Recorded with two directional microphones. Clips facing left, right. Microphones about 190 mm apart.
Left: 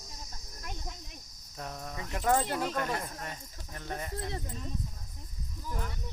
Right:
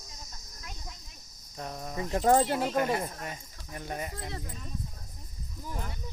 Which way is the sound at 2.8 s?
10° right (ahead or behind).